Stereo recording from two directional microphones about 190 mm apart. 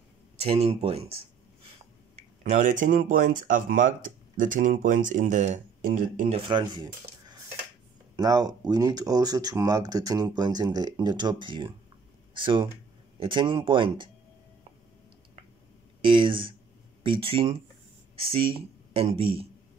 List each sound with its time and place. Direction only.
0.4 s speech: 30° right (ahead or behind)
16.0 s speech: 25° right (ahead or behind)